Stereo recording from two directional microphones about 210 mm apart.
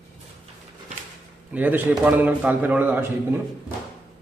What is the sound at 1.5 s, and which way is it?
A man's voice, 10° right (ahead or behind).